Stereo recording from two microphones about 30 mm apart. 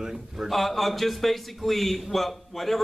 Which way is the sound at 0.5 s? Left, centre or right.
Centre.